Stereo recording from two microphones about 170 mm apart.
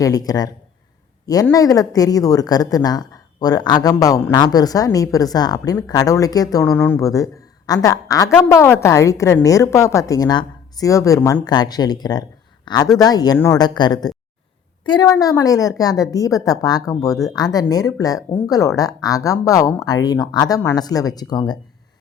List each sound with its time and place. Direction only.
0.0 s a woman's voice: 20° left (ahead or behind)